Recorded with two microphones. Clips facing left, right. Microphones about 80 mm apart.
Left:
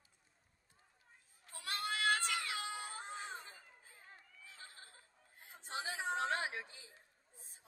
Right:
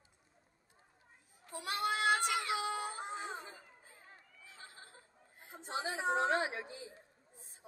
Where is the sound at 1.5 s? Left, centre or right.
Centre.